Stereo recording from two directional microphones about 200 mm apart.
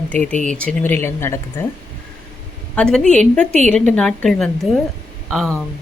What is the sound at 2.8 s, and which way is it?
A woman's voice, 5° left (ahead or behind).